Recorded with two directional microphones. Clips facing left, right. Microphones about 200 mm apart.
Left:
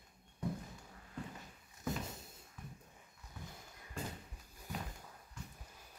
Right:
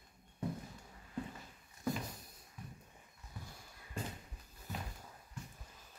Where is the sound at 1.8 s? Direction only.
25° left (ahead or behind).